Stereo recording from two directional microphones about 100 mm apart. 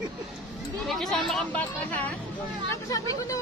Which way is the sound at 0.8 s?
Centre (ahead or behind).